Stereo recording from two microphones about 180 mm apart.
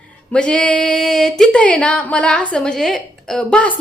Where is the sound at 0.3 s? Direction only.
5° left (ahead or behind).